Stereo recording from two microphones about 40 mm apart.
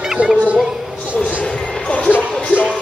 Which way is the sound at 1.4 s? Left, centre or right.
Left.